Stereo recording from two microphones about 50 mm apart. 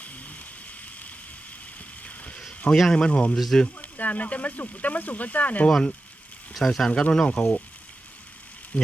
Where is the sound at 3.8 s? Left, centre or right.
Left.